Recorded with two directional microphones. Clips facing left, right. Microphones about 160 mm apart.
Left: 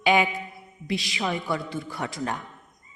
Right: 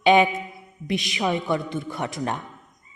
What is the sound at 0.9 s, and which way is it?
A woman's voice, 20° right (ahead or behind).